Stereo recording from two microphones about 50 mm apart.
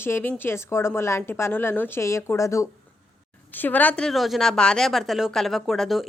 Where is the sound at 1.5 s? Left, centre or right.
Left.